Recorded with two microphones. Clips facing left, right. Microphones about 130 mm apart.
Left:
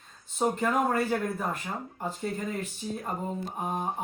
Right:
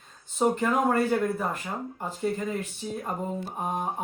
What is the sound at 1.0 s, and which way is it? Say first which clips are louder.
Speech: right 3 dB; centre (ahead or behind).